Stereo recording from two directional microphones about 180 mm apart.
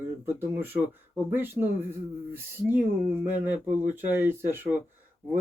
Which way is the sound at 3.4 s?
10° right (ahead or behind).